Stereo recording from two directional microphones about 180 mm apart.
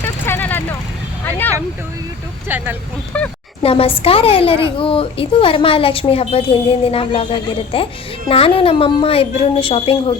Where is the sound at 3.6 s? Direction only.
30° left (ahead or behind).